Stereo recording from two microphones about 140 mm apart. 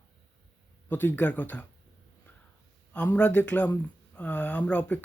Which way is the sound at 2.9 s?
10° left (ahead or behind).